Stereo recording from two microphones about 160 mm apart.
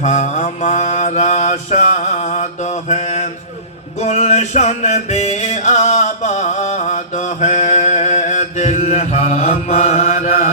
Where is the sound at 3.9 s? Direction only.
45° left (ahead or behind).